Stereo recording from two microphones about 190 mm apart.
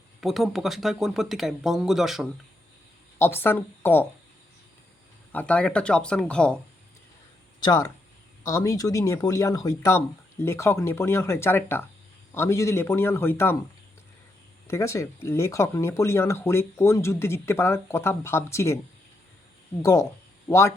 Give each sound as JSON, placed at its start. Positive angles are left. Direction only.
{"t": 0.2, "sound": "speech", "side_deg": 0}
{"t": 3.2, "sound": "speech", "side_deg": 10}
{"t": 5.3, "sound": "speech", "side_deg": 10}
{"t": 7.6, "sound": "speech", "side_deg": 20}
{"t": 14.7, "sound": "speech", "side_deg": 15}
{"t": 19.8, "sound": "speech", "side_deg": 15}